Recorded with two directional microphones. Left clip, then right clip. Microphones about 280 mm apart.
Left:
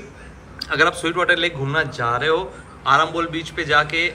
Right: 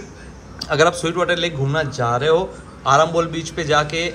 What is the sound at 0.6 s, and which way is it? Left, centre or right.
A man's voice, centre.